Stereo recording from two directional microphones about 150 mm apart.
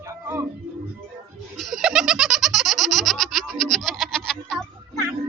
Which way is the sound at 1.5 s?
Centre (ahead or behind).